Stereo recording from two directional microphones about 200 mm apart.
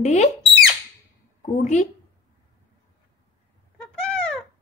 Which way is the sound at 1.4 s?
35° left (ahead or behind).